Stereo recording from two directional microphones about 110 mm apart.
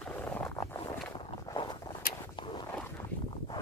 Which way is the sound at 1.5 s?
40° left (ahead or behind).